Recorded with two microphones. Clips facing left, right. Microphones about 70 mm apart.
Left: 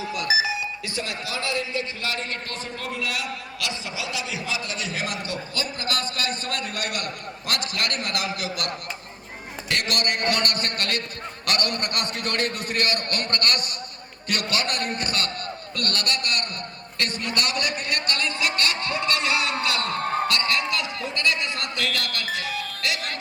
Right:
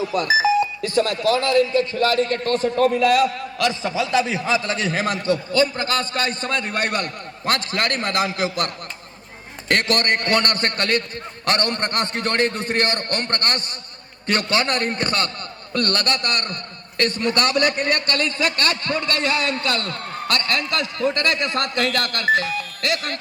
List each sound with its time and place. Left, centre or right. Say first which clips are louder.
0.1 s a man's voice: right 7 dB; right
19.8 s a man's voice: left 5 dB; left
20.5 s a man's voice: right 2 dB; right